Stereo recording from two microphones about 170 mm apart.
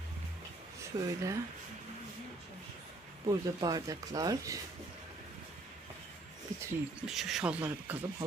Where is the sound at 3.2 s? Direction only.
20° right (ahead or behind).